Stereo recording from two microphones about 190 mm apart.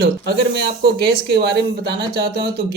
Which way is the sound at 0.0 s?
60° right (ahead or behind).